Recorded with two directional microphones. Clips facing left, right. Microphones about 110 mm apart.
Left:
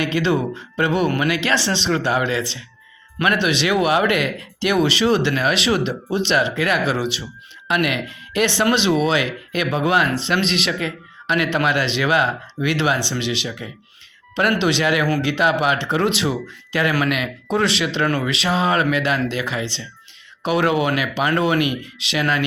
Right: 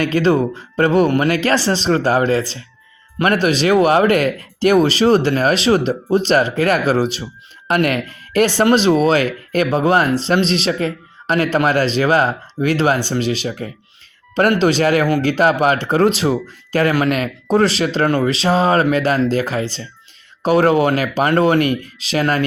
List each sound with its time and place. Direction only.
0.0 s speech: 40° right (ahead or behind)